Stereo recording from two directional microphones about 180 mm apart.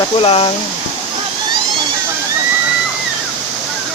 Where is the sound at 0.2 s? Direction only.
30° left (ahead or behind).